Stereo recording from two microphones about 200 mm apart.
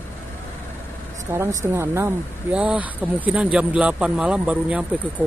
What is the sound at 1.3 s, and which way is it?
Speech, 15° right (ahead or behind).